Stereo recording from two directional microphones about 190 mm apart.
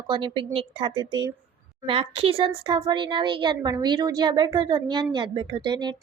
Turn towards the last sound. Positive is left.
turn(degrees=-25)  # may be behind; listen again after turning